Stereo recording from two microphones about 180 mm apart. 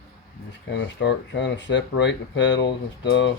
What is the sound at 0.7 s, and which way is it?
Speech, 75° left (ahead or behind).